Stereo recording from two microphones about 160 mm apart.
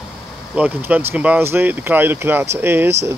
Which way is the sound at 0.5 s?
10° right (ahead or behind).